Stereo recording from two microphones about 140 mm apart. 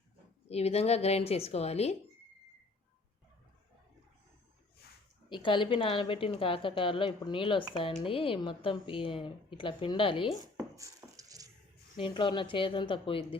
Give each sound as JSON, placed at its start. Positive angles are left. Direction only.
{"t": 0.4, "sound": "speech", "side_deg": 50}
{"t": 5.3, "sound": "speech", "side_deg": 35}
{"t": 10.8, "sound": "a sound", "side_deg": -25}
{"t": 11.9, "sound": "speech", "side_deg": 35}